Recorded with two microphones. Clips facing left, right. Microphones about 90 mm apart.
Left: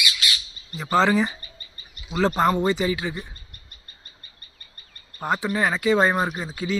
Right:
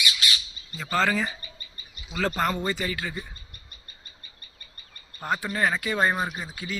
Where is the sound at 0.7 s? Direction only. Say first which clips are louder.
Left 5 dB; 20° left (ahead or behind).